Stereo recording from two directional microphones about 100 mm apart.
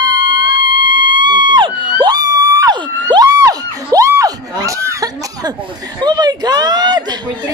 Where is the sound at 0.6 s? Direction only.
50° right (ahead or behind).